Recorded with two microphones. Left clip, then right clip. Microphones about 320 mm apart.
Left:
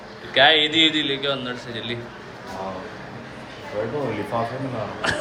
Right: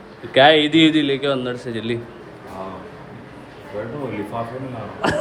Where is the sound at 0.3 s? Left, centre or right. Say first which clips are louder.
Right 3 dB; centre.